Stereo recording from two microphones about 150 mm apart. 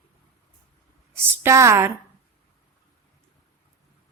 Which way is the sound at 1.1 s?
15° right (ahead or behind).